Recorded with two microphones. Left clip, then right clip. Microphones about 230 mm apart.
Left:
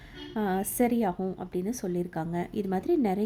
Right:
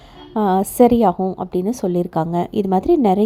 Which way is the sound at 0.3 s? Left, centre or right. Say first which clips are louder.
Right 14 dB; right.